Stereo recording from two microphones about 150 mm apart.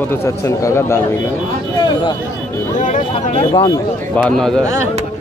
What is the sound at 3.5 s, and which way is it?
Speech, 20° left (ahead or behind).